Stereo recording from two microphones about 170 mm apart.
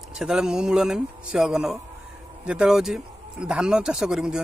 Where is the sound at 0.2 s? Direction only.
5° right (ahead or behind).